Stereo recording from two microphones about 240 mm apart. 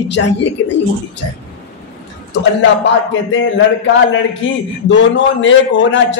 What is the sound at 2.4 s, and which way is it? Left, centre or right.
A man's voice, left.